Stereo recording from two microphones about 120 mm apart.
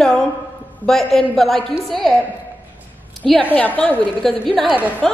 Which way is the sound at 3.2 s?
5° left (ahead or behind).